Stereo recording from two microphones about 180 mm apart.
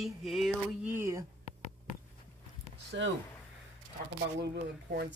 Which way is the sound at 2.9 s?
70° right (ahead or behind).